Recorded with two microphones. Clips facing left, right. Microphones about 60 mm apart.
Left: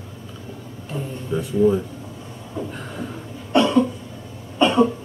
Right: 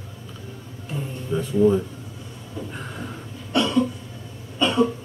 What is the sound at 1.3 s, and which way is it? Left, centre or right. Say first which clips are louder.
Speech: even; centre.